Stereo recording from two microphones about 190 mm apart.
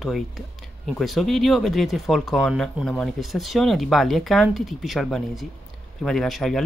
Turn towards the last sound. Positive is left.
turn(degrees=0)  # may be behind; listen again after turning